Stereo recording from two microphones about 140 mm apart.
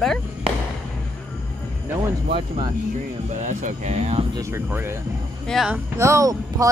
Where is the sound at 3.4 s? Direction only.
60° right (ahead or behind).